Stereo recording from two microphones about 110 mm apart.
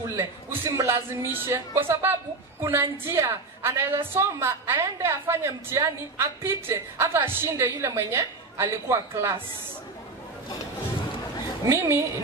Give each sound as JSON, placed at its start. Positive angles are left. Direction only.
{"t": 0.1, "sound": "a woman's voice", "side_deg": -25}
{"t": 11.7, "sound": "a woman's voice", "side_deg": -25}